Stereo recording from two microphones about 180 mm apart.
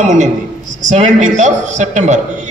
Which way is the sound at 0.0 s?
45° right (ahead or behind).